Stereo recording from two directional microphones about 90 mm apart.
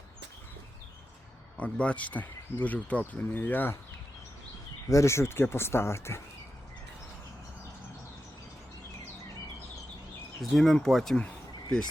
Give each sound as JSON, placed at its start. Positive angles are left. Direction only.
{"t": 1.5, "sound": "speech", "side_deg": 15}
{"t": 4.9, "sound": "speech", "side_deg": 35}
{"t": 10.5, "sound": "speech", "side_deg": 5}
{"t": 11.2, "sound": "a sound", "side_deg": 15}